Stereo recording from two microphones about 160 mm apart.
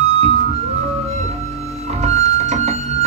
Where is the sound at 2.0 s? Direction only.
45° right (ahead or behind).